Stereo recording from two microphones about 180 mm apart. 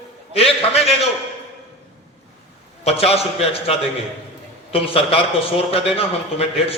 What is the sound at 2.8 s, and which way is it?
A man's voice, 35° left (ahead or behind).